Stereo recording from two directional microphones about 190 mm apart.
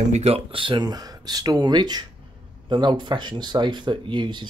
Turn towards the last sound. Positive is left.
turn(degrees=-25)  # may be behind; listen again after turning